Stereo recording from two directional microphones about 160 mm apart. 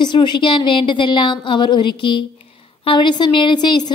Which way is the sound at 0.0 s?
30° left (ahead or behind).